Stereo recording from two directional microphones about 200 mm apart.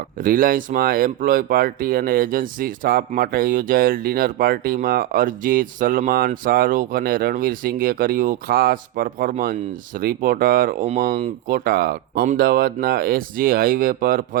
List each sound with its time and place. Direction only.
0.2 s speech: 45° right (ahead or behind)